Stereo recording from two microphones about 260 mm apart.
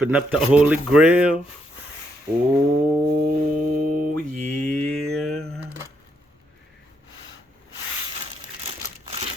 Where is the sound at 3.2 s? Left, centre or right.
Right.